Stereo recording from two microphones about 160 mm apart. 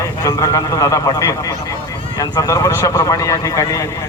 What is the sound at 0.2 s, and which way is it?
Speech, 20° left (ahead or behind).